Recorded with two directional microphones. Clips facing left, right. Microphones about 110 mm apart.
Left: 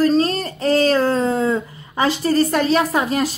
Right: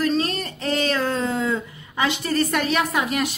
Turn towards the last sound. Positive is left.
turn(degrees=35)  # may be behind; listen again after turning